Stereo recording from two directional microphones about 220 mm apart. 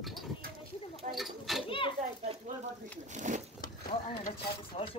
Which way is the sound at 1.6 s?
25° left (ahead or behind).